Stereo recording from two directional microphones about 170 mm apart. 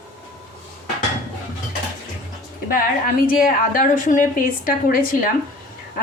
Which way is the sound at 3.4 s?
50° left (ahead or behind).